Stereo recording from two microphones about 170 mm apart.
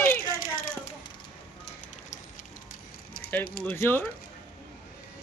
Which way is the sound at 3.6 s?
15° left (ahead or behind).